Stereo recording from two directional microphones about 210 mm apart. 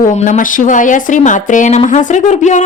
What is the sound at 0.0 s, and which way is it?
Speech, 40° left (ahead or behind).